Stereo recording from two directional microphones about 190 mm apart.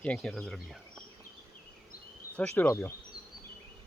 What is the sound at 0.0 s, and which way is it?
Speech, 5° left (ahead or behind).